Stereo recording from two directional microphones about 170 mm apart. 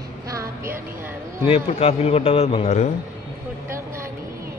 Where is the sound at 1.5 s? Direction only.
35° left (ahead or behind).